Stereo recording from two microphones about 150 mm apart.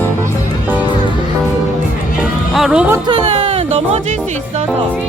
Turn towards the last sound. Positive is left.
turn(degrees=-45)  # may be behind; listen again after turning